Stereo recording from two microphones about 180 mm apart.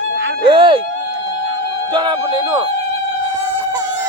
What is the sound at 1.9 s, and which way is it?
Speech, 25° right (ahead or behind).